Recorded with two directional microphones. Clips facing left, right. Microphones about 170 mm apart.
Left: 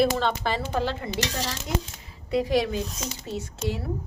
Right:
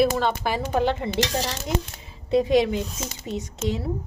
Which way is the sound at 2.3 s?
20° right (ahead or behind).